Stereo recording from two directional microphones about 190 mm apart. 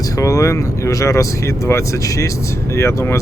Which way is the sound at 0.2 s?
15° left (ahead or behind).